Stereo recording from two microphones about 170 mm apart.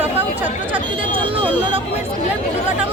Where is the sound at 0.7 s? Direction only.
30° right (ahead or behind).